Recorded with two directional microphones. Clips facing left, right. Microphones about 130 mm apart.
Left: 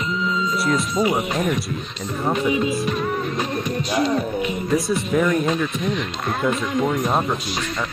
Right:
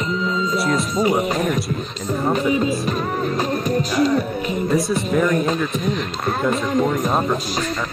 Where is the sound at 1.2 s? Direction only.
40° right (ahead or behind).